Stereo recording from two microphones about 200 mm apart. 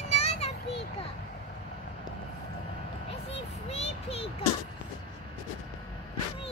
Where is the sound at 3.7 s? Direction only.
30° left (ahead or behind).